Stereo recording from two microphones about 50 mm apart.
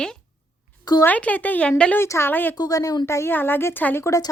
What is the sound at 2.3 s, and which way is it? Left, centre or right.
Speech, left.